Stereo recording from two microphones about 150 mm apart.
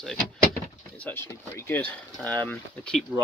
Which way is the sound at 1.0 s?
15° left (ahead or behind).